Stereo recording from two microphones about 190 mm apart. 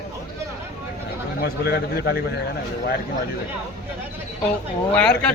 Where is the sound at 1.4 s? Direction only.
55° left (ahead or behind).